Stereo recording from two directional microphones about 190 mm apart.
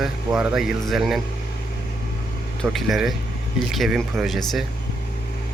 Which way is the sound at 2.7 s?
Centre (ahead or behind).